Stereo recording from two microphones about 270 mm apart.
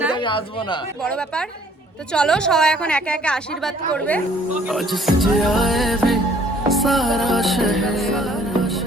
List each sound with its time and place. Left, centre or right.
0.2 s speech: centre
2.1 s a woman's voice: centre
6.7 s music: centre